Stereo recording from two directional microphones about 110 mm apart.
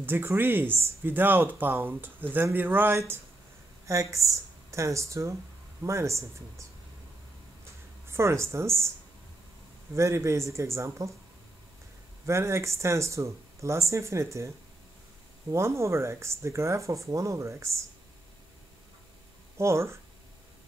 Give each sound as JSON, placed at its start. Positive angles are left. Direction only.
{"t": 0.0, "sound": "speech", "side_deg": -20}
{"t": 8.1, "sound": "speech", "side_deg": -25}
{"t": 9.9, "sound": "speech", "side_deg": -25}
{"t": 12.3, "sound": "speech", "side_deg": -25}
{"t": 15.5, "sound": "speech", "side_deg": -25}
{"t": 19.5, "sound": "speech", "side_deg": -25}